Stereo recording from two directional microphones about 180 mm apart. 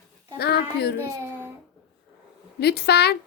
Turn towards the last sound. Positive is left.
turn(degrees=65)  # may be behind; listen again after turning